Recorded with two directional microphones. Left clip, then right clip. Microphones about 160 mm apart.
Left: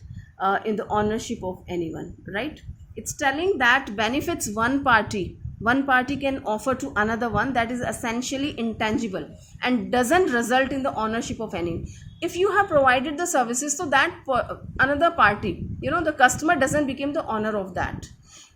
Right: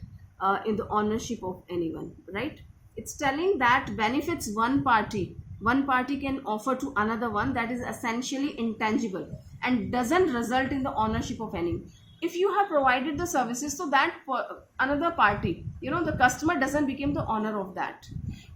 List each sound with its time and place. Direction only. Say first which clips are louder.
0.3 s speech: left 3 dB; 50° left (ahead or behind)
2.9 s a woman's voice: left 4 dB; 55° left (ahead or behind)